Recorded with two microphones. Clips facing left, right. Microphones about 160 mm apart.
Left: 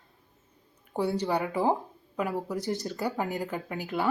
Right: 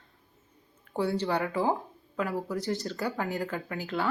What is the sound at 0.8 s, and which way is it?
Speech, 15° left (ahead or behind).